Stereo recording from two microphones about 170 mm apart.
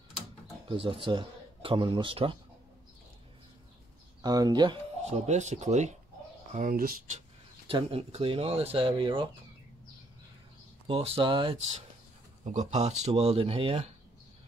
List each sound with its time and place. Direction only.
0.7 s a man's voice: 30° right (ahead or behind)
4.2 s speech: 25° right (ahead or behind)
5.1 s speech: 40° right (ahead or behind)
6.5 s speech: 55° right (ahead or behind)
7.2 s speech: 35° right (ahead or behind)
10.9 s speech: 35° right (ahead or behind)
12.4 s speech: 40° right (ahead or behind)